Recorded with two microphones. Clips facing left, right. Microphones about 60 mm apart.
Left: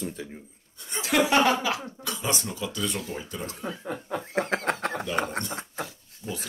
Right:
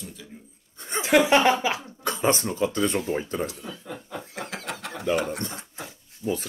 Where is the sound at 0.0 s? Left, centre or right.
Left.